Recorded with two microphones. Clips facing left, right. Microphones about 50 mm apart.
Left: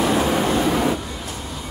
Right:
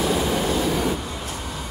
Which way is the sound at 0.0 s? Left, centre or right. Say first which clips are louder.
Left 3 dB; left.